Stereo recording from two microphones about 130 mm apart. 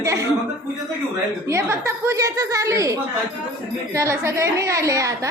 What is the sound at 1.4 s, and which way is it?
A woman's voice, 20° right (ahead or behind).